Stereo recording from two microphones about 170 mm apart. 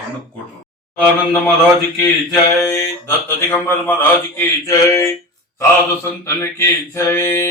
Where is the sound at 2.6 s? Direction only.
15° left (ahead or behind).